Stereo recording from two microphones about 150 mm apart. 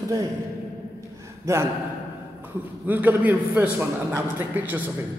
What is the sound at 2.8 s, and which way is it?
A man's voice, 10° right (ahead or behind).